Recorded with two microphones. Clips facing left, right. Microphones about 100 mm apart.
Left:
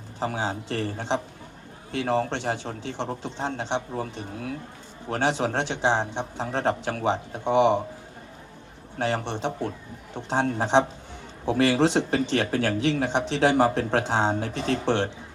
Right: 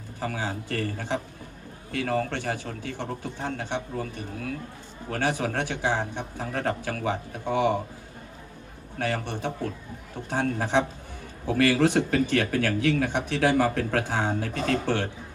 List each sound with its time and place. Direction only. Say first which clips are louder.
0.2 s speech: left 3 dB; 25° left (ahead or behind)
9.0 s speech: left 2 dB; 25° left (ahead or behind)